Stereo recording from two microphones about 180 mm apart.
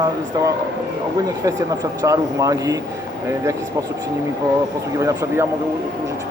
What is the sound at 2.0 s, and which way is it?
Speech, 20° right (ahead or behind).